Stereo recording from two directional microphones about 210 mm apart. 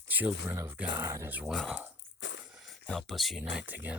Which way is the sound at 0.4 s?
10° right (ahead or behind).